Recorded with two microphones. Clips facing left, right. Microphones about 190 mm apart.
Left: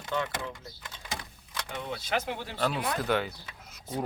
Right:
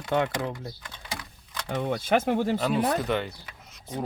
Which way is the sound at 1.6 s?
50° right (ahead or behind).